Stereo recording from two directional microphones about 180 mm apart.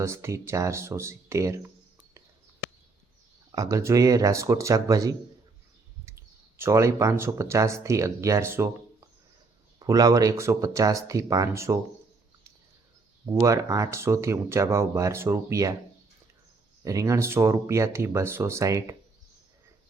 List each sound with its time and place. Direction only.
0.0 s speech: 15° right (ahead or behind)
3.5 s speech: 20° right (ahead or behind)
9.7 s speech: 20° right (ahead or behind)
13.4 s speech: 15° right (ahead or behind)
16.8 s speech: 20° right (ahead or behind)